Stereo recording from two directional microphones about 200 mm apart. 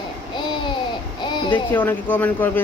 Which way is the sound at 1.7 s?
10° left (ahead or behind).